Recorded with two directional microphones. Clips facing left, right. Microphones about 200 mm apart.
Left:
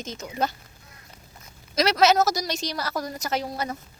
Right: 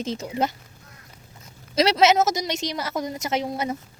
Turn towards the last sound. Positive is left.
turn(degrees=-20)  # may be behind; listen again after turning